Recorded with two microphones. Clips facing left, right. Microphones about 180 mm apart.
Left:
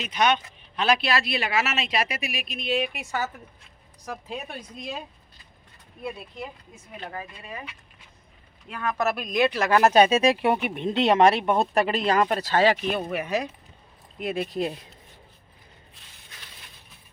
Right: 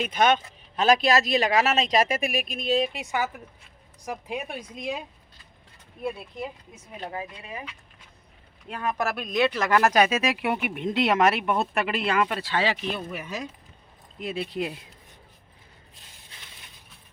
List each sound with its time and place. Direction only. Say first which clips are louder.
0.0 s speech: right 2 dB; 50° right (ahead or behind)
2.9 s speech: right 2 dB; 20° right (ahead or behind)
7.0 s speech: right 3 dB; 15° right (ahead or behind)
8.7 s speech: even; 25° right (ahead or behind)
9.6 s speech: left 5 dB; 20° left (ahead or behind); by 12.8 s 45° left (ahead or behind)
12.9 s speech: left 6 dB; 60° left (ahead or behind)
14.4 s speech: left 2 dB; 40° left (ahead or behind)